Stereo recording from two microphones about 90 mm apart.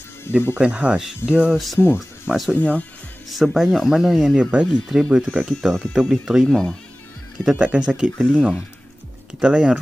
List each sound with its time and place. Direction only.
0.3 s speech: 25° left (ahead or behind)
0.6 s speech: 15° right (ahead or behind)
2.5 s speech: 15° left (ahead or behind)
3.3 s speech: centre (ahead or behind)
6.4 s speech: 5° left (ahead or behind)
7.4 s speech: 10° right (ahead or behind)